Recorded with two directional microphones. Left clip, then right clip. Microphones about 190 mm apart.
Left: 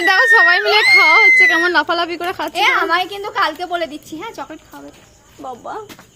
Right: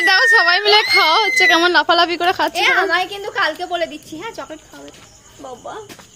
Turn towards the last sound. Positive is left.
turn(degrees=25)  # may be behind; listen again after turning